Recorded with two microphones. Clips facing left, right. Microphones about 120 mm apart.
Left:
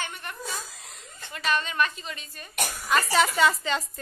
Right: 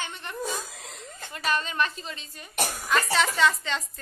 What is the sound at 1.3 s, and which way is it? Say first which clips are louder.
A woman's voice: left 1 dB; 35° right (ahead or behind).